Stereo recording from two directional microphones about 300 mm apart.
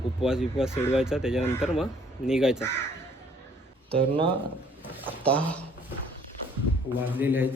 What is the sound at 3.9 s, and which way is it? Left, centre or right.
Speech, centre.